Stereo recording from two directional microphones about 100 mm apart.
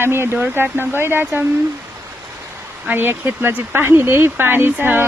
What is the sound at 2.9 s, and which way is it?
Speech, 20° right (ahead or behind).